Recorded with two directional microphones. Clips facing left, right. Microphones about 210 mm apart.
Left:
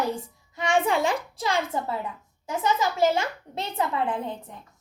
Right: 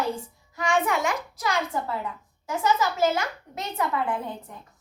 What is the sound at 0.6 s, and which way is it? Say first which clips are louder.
A child's voice: left 1 dB; 30° left (ahead or behind).